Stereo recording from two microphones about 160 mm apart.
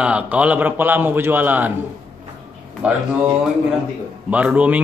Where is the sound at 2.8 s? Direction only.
10° right (ahead or behind).